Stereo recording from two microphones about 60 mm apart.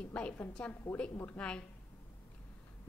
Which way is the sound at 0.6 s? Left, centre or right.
Centre.